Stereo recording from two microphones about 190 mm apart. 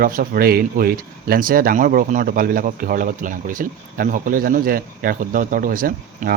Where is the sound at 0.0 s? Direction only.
50° right (ahead or behind).